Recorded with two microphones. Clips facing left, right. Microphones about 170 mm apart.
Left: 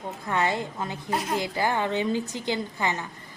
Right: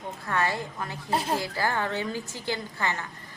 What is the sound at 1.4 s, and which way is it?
A woman's voice, 20° left (ahead or behind).